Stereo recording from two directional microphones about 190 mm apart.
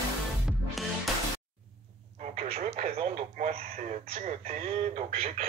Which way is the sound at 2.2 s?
30° right (ahead or behind).